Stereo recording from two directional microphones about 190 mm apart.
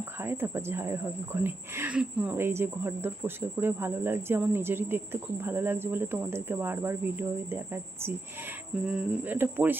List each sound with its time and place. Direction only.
0.2 s speech: 10° right (ahead or behind)